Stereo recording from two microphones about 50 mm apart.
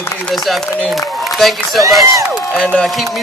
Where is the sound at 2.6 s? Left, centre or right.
Centre.